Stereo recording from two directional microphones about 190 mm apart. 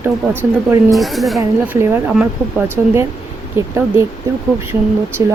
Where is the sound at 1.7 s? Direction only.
10° right (ahead or behind).